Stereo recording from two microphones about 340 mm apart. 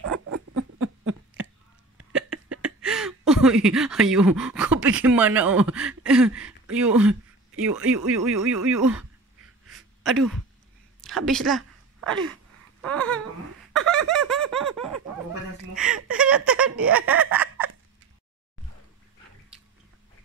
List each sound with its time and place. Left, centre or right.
0.0 s rodents: right
2.1 s speech: centre
9.7 s a sound: centre
12.8 s babbling: centre
13.7 s fowl: centre
15.7 s a sound: centre